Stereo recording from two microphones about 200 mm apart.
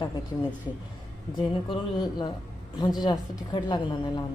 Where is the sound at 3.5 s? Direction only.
20° left (ahead or behind).